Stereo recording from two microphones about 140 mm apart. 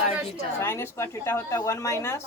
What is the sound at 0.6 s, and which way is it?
A woman's voice, 20° left (ahead or behind).